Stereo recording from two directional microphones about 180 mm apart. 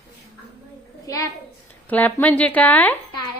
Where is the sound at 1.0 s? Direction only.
20° left (ahead or behind).